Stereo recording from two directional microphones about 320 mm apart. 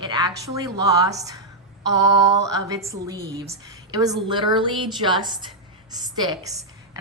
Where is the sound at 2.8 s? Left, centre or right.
Centre.